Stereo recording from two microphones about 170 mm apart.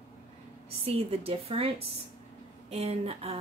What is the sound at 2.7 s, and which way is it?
Speech, 35° right (ahead or behind).